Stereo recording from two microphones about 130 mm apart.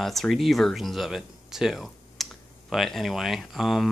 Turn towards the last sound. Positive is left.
turn(degrees=0)  # may be behind; listen again after turning